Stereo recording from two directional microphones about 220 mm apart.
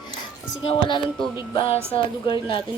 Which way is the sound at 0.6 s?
20° left (ahead or behind).